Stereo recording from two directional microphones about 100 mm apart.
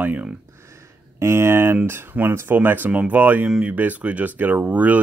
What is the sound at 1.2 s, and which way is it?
Speech, 25° right (ahead or behind).